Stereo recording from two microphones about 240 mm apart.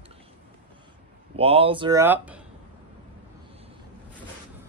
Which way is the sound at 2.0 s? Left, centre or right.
Centre.